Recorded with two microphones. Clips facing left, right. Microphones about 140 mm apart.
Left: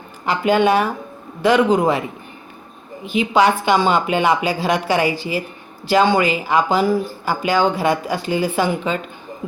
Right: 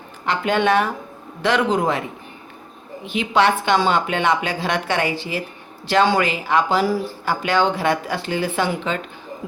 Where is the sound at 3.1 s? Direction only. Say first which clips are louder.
Left 2 dB; 5° left (ahead or behind).